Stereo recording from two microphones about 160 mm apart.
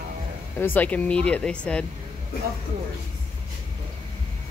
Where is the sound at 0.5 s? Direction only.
10° left (ahead or behind).